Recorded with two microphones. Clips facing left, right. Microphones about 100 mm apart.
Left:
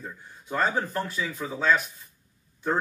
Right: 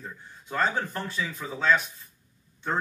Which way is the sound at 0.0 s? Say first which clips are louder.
Left 1 dB; 5° left (ahead or behind).